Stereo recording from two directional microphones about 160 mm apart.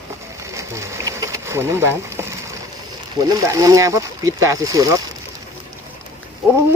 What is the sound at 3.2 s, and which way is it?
Speech, 25° right (ahead or behind).